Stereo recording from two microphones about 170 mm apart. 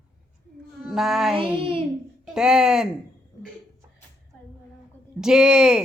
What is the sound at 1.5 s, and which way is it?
Speech, 30° right (ahead or behind).